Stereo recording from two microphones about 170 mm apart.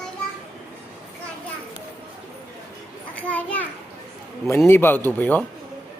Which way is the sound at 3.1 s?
10° left (ahead or behind).